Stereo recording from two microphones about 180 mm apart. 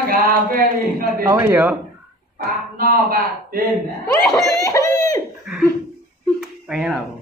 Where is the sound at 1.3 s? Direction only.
10° right (ahead or behind).